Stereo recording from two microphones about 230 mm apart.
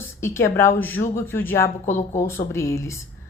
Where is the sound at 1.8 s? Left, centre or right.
Left.